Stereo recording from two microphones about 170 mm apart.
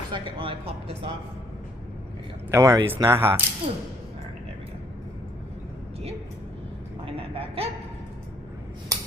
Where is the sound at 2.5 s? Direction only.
15° right (ahead or behind).